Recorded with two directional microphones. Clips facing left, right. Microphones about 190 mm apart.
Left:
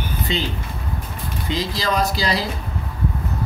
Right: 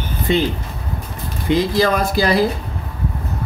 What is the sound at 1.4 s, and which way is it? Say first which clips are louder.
Speech: right 8 dB; 55° right (ahead or behind).